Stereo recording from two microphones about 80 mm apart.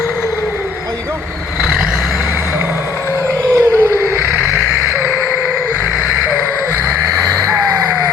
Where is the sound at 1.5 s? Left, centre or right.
Centre.